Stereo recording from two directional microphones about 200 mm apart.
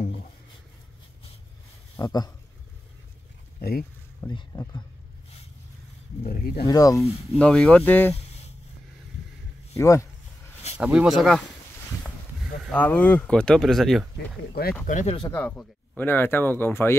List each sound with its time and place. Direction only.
2.0 s speech: 20° left (ahead or behind)
4.2 s speech: 20° left (ahead or behind)
6.2 s speech: 50° left (ahead or behind)
6.7 s speech: 15° left (ahead or behind)
7.3 s speech: 5° left (ahead or behind)
9.8 s speech: 15° left (ahead or behind)
10.8 s speech: 5° right (ahead or behind)
12.6 s speech: 10° left (ahead or behind)
14.5 s speech: 50° left (ahead or behind)
14.9 s speech: 35° left (ahead or behind)
15.2 s speech: 10° left (ahead or behind)